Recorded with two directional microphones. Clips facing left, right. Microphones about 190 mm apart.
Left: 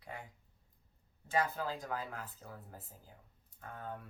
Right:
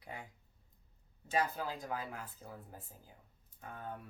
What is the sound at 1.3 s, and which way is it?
Speech, 15° right (ahead or behind).